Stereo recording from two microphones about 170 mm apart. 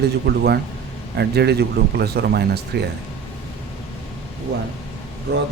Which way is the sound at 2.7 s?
85° right.